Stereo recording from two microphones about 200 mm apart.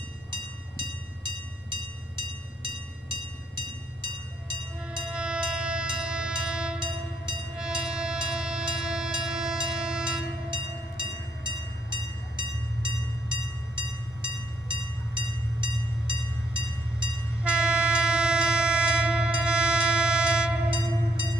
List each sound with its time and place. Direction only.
0.3 s train: 25° right (ahead or behind)
5.1 s music: 5° right (ahead or behind)
7.5 s train: 5° right (ahead or behind)
10.5 s train: 25° right (ahead or behind)
17.4 s train: 5° right (ahead or behind)